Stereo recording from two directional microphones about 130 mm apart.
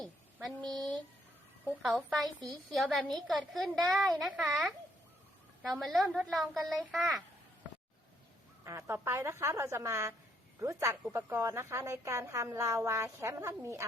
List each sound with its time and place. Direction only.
0.4 s a woman's voice: 5° left (ahead or behind)
8.6 s a woman's voice: 20° right (ahead or behind)